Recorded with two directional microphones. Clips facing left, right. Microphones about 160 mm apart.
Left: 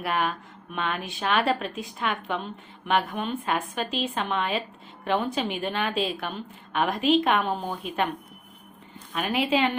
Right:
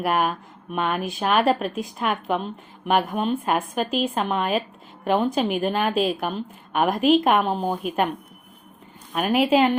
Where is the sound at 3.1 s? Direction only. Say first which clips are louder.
Right 6 dB; 40° right (ahead or behind).